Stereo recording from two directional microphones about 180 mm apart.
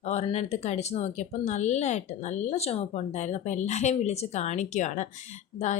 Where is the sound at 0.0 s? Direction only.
40° left (ahead or behind).